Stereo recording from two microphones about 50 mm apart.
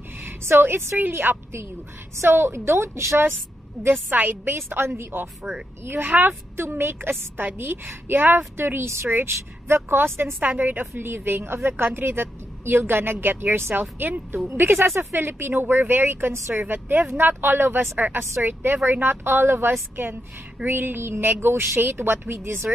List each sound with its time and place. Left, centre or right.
0.2 s a woman's voice: right
3.8 s a woman's voice: centre
4.1 s a woman's voice: right
10.4 s a woman's voice: right
14.5 s a woman's voice: right